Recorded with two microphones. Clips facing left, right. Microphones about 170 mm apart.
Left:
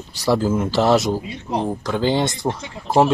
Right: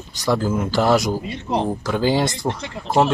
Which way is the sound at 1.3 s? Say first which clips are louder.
Right 1 dB; 80° right.